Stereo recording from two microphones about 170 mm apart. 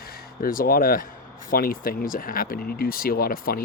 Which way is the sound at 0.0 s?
60° left (ahead or behind).